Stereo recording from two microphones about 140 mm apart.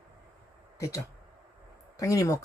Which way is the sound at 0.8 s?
20° left (ahead or behind).